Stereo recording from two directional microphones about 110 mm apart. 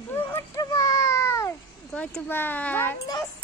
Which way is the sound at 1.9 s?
10° left (ahead or behind).